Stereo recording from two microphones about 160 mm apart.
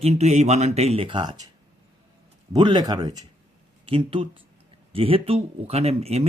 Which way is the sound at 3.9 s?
35° right (ahead or behind).